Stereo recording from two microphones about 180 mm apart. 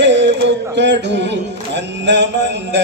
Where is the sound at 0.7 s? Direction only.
75° right (ahead or behind).